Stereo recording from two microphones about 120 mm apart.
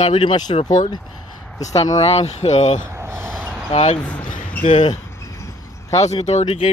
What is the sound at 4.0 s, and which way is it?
Speech, 10° left (ahead or behind).